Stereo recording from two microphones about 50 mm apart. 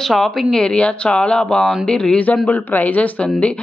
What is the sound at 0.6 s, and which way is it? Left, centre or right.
A woman's voice, left.